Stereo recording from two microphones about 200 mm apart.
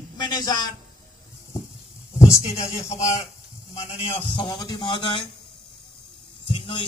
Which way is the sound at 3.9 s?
30° left (ahead or behind).